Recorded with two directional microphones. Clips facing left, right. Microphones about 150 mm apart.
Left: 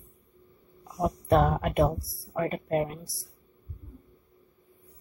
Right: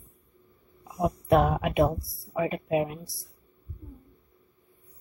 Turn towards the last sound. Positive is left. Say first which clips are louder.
# right 1 dB
turn(degrees=0)  # may be behind; listen again after turning